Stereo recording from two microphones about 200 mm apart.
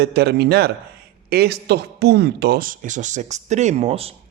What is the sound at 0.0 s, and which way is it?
A man's voice, 55° right (ahead or behind).